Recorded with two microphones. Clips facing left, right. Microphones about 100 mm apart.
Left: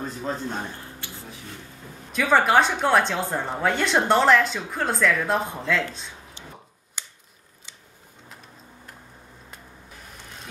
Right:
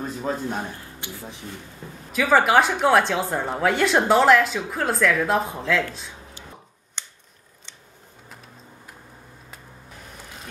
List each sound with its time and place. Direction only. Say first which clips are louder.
0.0 s a man's voice: right 2 dB; 10° right (ahead or behind)
2.1 s a woman's voice: right 1 dB; 5° right (ahead or behind)
7.0 s scissors: even; 5° left (ahead or behind)